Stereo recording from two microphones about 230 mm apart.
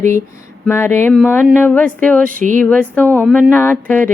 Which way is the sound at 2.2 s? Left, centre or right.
Right.